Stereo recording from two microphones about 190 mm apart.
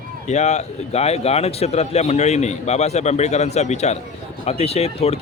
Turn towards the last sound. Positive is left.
turn(degrees=30)  # may be behind; listen again after turning